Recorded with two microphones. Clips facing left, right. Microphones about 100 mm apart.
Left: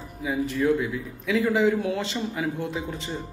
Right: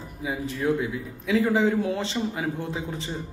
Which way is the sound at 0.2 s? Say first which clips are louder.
Left 3 dB; 25° right (ahead or behind).